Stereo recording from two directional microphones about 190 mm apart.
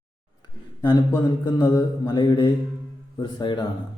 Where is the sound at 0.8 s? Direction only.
20° left (ahead or behind).